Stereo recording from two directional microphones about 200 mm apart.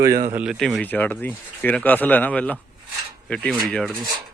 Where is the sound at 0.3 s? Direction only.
Centre (ahead or behind).